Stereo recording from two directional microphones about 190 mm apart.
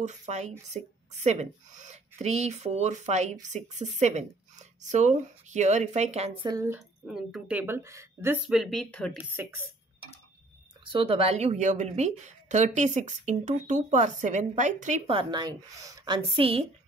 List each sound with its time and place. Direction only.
0.0 s a woman's voice: 40° right (ahead or behind)
6.5 s a woman's voice: 15° right (ahead or behind)
7.1 s a woman's voice: centre (ahead or behind)
8.5 s speech: centre (ahead or behind)
10.9 s a woman's voice: 30° right (ahead or behind)
15.1 s a woman's voice: 20° right (ahead or behind)